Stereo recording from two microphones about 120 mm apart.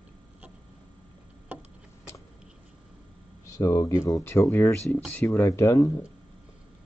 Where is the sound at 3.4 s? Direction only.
25° left (ahead or behind).